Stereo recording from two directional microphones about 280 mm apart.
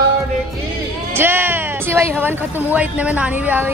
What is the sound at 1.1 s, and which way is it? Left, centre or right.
Speech, centre.